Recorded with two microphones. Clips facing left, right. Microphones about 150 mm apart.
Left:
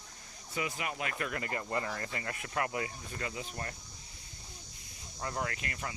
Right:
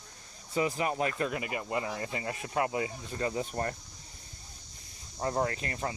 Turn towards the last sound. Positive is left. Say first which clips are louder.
# right 6 dB
turn(degrees=-30)  # may be behind; listen again after turning